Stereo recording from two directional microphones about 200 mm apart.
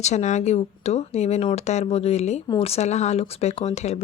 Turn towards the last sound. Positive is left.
turn(degrees=35)  # may be behind; listen again after turning